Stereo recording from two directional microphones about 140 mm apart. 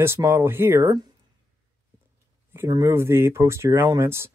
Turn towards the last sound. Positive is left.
turn(degrees=-20)  # may be behind; listen again after turning